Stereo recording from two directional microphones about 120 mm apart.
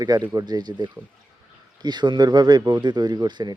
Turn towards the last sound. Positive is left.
turn(degrees=-35)  # may be behind; listen again after turning